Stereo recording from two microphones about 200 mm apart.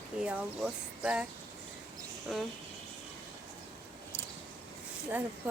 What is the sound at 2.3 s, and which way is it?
Speech, centre (ahead or behind).